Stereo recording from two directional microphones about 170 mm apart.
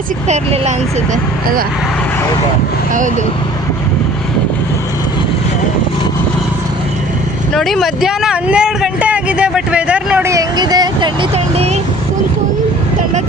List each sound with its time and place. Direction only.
0.3 s speech: 40° right (ahead or behind)
1.1 s speech: 55° right (ahead or behind)
7.5 s speech: centre (ahead or behind); by 11.8 s 35° right (ahead or behind)